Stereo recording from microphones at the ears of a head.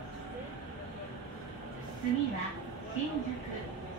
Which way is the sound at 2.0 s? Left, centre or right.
Right.